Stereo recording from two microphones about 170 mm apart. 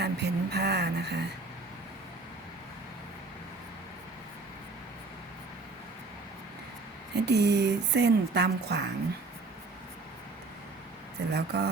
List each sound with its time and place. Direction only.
0.0 s speech: 75° right (ahead or behind)
7.2 s speech: 80° right
11.2 s speech: 75° right (ahead or behind)